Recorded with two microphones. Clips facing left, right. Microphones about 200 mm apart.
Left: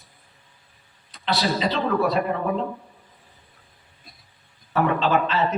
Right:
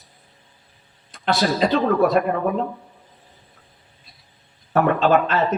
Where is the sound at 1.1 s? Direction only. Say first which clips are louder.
Right 3 dB; 50° right (ahead or behind).